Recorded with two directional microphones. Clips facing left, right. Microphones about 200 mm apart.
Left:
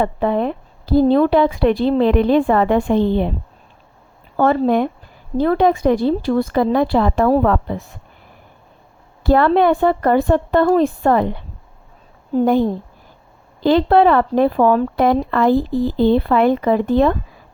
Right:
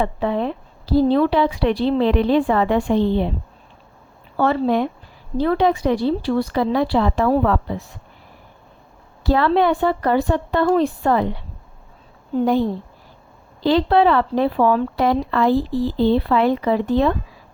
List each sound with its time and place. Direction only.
0.0 s speech: 50° left (ahead or behind)
4.4 s speech: 45° left (ahead or behind)
9.2 s speech: 50° left (ahead or behind)
13.6 s speech: 50° left (ahead or behind)
15.7 s speech: 15° left (ahead or behind)
16.0 s speech: 50° left (ahead or behind)